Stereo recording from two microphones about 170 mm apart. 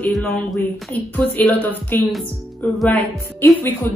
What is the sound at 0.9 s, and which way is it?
Speech, 10° left (ahead or behind).